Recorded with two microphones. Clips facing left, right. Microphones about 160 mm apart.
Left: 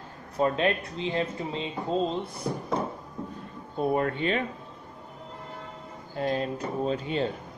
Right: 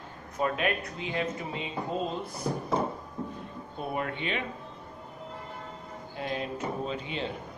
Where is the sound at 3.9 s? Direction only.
40° left (ahead or behind).